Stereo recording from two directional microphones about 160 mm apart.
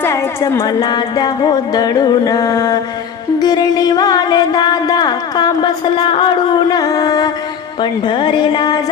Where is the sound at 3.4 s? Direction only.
25° left (ahead or behind).